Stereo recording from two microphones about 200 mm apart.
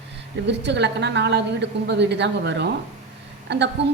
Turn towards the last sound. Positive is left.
turn(degrees=-60)  # may be behind; listen again after turning